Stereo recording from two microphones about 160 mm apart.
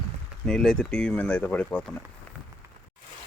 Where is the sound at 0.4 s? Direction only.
5° left (ahead or behind).